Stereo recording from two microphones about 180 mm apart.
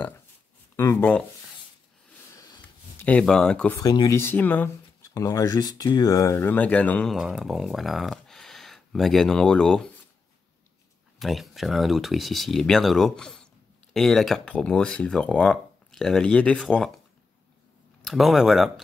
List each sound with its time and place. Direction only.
0.7 s speech: 10° left (ahead or behind)
2.3 s sniff: 20° left (ahead or behind)
3.1 s speech: 5° left (ahead or behind)
3.8 s speech: 20° left (ahead or behind); by 9.8 s 5° left (ahead or behind)
11.1 s speech: centre (ahead or behind)
18.0 s speech: centre (ahead or behind)